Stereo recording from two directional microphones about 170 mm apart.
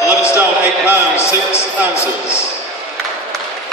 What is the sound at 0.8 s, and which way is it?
A man's voice, 15° left (ahead or behind).